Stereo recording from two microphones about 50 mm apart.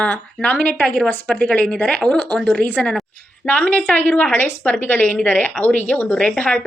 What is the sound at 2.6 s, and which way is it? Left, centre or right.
A woman's voice, left.